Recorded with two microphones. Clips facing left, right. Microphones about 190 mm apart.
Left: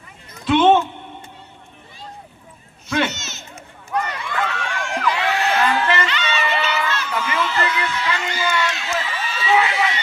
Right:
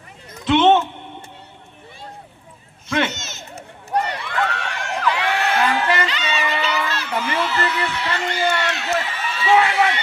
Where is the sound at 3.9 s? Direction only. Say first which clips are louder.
Right 2 dB; 35° right (ahead or behind).